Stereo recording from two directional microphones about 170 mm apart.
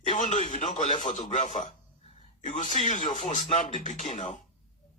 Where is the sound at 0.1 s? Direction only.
45° left (ahead or behind).